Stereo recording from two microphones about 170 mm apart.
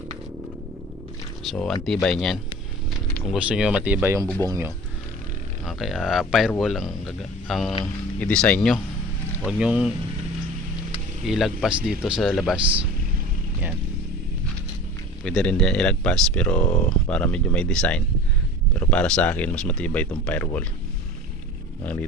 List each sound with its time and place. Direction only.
1.5 s speech: 5° left (ahead or behind); by 4.7 s 20° right (ahead or behind)
5.6 s speech: centre (ahead or behind)
11.3 s speech: centre (ahead or behind)
15.2 s speech: 5° left (ahead or behind)